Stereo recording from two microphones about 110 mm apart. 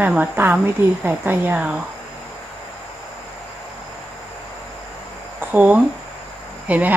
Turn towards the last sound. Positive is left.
turn(degrees=-15)  # may be behind; listen again after turning